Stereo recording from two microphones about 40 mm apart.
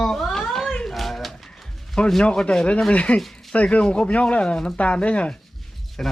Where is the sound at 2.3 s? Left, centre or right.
Left.